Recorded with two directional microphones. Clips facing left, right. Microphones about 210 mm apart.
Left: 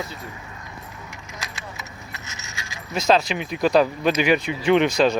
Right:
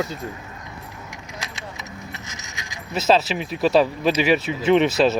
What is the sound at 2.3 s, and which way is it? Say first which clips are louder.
Keys jangling: right 1 dB; 15° right (ahead or behind).